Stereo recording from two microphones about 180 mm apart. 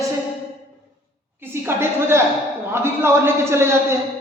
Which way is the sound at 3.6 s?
15° right (ahead or behind).